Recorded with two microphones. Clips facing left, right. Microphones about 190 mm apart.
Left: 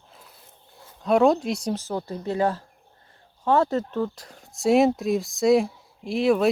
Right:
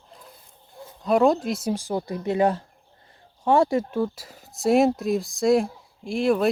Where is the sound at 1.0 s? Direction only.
Centre (ahead or behind).